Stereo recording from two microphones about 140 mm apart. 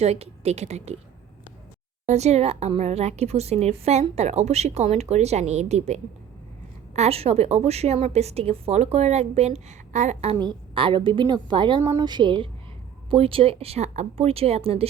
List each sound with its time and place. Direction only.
0.0 s a woman's voice: 50° right (ahead or behind)
2.0 s a woman's voice: 50° right (ahead or behind)
10.3 s a woman's voice: 30° right (ahead or behind)